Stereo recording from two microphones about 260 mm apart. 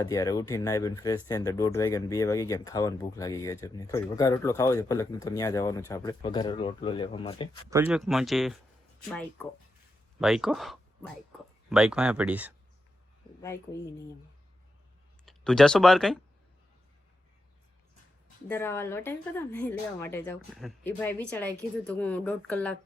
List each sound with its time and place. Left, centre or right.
0.1 s speech: centre
7.7 s speech: centre
15.3 s speech: centre
18.4 s speech: centre